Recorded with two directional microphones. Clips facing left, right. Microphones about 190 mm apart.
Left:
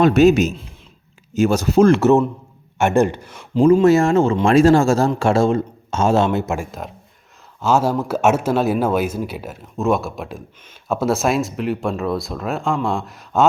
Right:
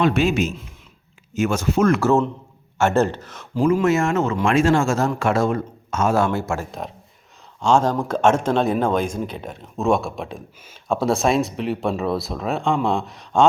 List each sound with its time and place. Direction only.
0.0 s speech: 40° left (ahead or behind); by 3.6 s 10° left (ahead or behind)
3.6 s speech: 30° left (ahead or behind)
6.7 s speech: centre (ahead or behind)